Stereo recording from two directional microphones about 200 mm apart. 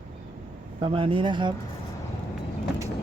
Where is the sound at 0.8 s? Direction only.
25° right (ahead or behind).